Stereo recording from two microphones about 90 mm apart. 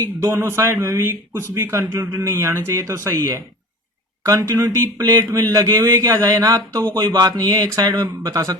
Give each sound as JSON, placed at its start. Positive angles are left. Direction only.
{"t": 0.0, "sound": "speech", "side_deg": -30}